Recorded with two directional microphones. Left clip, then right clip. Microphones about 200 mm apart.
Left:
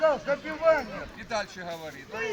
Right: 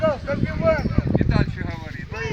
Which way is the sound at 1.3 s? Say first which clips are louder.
Right 5 dB; 65° left (ahead or behind).